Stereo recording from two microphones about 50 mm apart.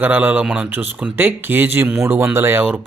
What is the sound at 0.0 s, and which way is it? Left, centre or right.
Speech, right.